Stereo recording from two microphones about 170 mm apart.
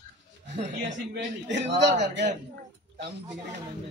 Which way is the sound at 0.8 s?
90° right.